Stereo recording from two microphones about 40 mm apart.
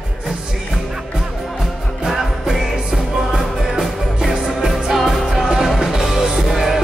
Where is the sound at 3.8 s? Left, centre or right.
Centre.